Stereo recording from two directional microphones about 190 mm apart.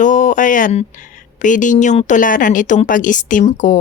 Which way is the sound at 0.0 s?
40° left (ahead or behind).